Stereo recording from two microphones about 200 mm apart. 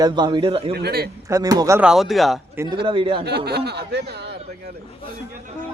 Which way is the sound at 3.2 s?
55° right (ahead or behind).